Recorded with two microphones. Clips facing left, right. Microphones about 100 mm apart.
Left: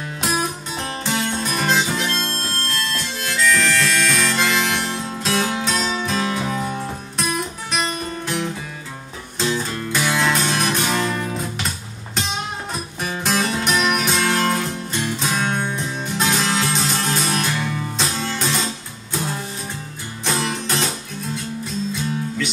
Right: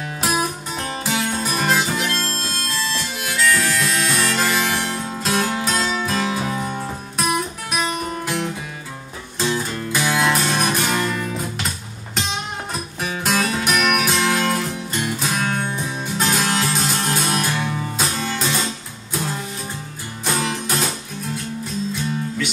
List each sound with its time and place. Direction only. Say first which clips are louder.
0.2 s music: right 1 dB; 5° right (ahead or behind)
9.4 s music: even; 5° right (ahead or behind)
13.0 s music: even; centre (ahead or behind)
20.2 s music: even; 5° right (ahead or behind)